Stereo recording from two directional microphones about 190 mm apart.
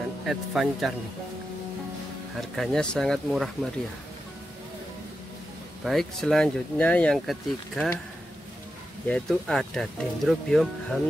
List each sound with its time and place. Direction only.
0.3 s speech: centre (ahead or behind)
2.5 s speech: centre (ahead or behind)
5.9 s speech: centre (ahead or behind)
9.0 s speech: 5° left (ahead or behind)